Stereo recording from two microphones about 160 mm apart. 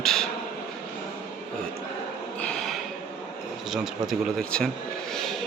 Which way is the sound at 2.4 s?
5° left (ahead or behind).